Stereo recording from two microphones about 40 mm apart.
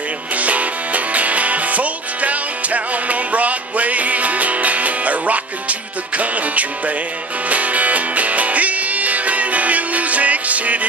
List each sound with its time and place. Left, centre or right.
0.4 s music: right